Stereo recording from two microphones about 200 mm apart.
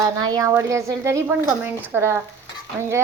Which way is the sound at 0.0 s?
20° right (ahead or behind).